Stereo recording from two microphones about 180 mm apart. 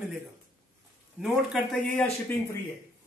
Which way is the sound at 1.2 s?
Centre (ahead or behind).